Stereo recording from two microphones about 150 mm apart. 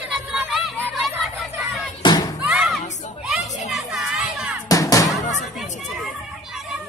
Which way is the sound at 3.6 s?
Centre (ahead or behind).